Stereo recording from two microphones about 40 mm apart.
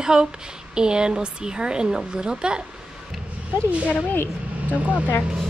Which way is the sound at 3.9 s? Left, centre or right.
Left.